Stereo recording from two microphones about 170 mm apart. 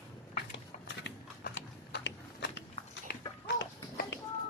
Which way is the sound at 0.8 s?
90° left.